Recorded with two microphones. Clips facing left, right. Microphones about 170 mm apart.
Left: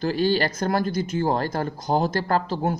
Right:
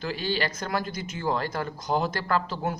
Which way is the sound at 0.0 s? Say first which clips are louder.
Left 7 dB; 40° left (ahead or behind).